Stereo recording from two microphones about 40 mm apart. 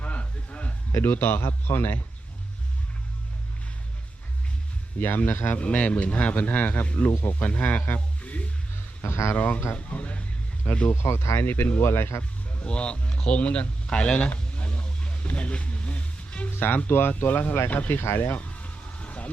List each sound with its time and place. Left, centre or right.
0.0 s a sound: left
1.1 s speech: left
4.9 s speech: left
5.5 s speech: left
6.8 s speech: left
9.0 s speech: left
9.3 s speech: left
10.9 s speech: left
12.6 s speech: left
14.3 s a sound: left
15.4 s music: left
16.5 s speech: left
18.3 s a sound: left